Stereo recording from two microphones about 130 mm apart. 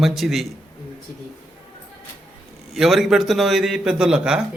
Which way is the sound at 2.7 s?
Centre (ahead or behind).